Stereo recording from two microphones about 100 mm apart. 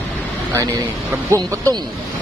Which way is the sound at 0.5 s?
35° right (ahead or behind).